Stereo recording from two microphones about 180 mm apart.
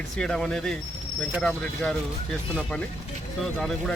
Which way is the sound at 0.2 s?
5° left (ahead or behind).